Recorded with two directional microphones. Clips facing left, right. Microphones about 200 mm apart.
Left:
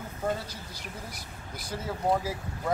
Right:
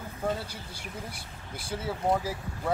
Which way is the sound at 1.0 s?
30° right (ahead or behind).